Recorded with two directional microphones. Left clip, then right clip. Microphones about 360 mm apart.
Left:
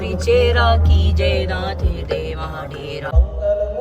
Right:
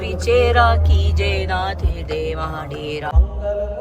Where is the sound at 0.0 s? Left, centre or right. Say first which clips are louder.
Left 1 dB; centre.